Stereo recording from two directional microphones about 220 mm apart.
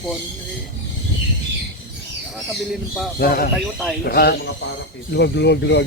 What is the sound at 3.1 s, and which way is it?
Speech, 45° left (ahead or behind).